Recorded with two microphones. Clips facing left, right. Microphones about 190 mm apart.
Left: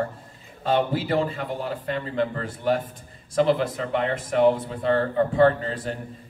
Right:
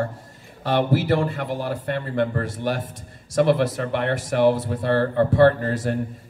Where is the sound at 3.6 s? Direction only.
75° right (ahead or behind).